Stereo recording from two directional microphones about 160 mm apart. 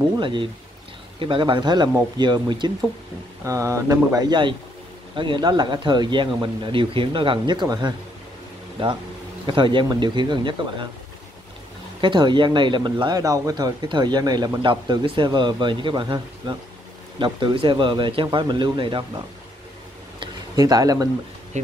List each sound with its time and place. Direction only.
0.2 s speech: 30° right (ahead or behind)
12.0 s speech: 30° right (ahead or behind)
20.2 s a sound: 25° right (ahead or behind)
21.5 s speech: 45° right (ahead or behind)